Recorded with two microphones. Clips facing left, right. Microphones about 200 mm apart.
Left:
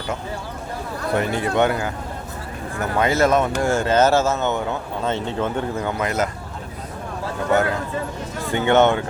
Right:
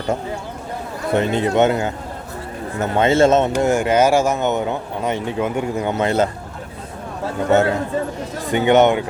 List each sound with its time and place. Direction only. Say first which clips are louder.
1.1 s speech: right 4 dB; 25° right (ahead or behind)
7.5 s speech: right 4 dB; 25° right (ahead or behind)